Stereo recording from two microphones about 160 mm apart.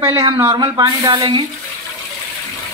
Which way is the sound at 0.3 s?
20° right (ahead or behind).